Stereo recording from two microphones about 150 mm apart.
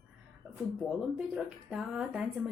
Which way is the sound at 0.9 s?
5° right (ahead or behind).